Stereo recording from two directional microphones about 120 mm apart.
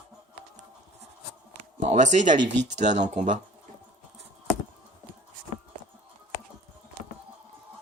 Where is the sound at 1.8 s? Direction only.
75° right (ahead or behind).